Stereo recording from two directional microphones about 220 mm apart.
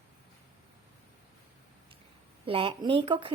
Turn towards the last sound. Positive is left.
turn(degrees=-25)  # may be behind; listen again after turning